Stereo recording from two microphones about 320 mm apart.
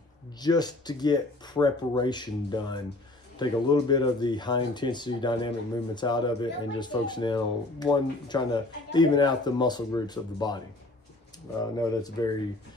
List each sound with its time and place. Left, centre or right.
0.4 s speech: centre
11.7 s speech: centre